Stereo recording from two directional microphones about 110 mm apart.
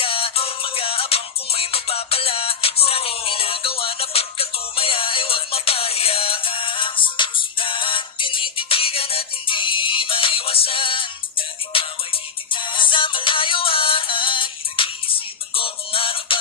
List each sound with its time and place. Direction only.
0.0 s music: 55° left (ahead or behind)